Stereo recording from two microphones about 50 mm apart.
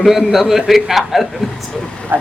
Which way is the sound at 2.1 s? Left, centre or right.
Right.